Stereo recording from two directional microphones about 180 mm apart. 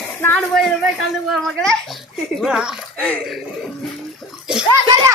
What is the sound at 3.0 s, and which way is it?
Speech, 5° left (ahead or behind).